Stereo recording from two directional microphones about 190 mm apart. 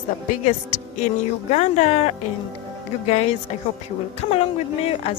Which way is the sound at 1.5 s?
35° left (ahead or behind).